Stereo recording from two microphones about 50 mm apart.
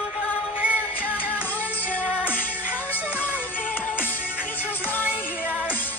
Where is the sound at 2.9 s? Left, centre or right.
Left.